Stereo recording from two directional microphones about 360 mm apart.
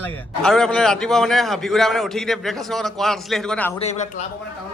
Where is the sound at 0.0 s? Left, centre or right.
Centre.